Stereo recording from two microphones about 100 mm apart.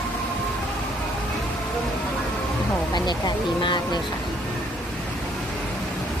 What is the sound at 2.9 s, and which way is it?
Speech, 45° left (ahead or behind).